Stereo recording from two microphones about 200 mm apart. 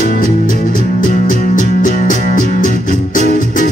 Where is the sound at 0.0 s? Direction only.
45° left (ahead or behind).